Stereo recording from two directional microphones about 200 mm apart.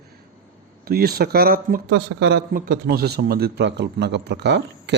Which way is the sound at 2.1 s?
55° right (ahead or behind).